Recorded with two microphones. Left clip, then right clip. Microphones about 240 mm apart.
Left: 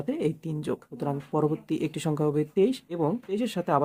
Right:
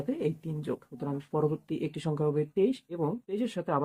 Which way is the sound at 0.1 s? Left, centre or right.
Left.